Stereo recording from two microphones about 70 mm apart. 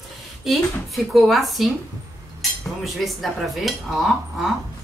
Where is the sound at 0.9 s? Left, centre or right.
Centre.